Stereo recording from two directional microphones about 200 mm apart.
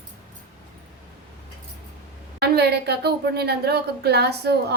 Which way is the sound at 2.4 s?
55° right (ahead or behind).